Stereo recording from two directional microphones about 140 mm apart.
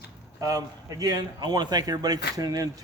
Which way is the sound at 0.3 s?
25° right (ahead or behind).